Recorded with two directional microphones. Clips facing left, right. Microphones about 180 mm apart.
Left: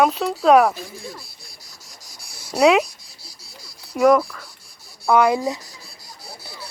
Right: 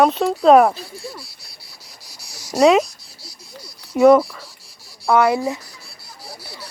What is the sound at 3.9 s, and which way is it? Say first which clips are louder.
Speech: right 4 dB; centre (ahead or behind).